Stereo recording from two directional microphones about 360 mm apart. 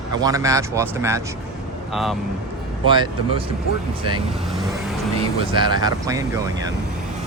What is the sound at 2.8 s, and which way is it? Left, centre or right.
Speech, centre.